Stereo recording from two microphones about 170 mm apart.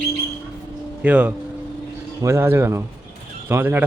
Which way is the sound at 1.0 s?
10° right (ahead or behind).